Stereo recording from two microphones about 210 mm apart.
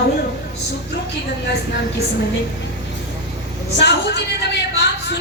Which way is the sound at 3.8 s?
55° left (ahead or behind).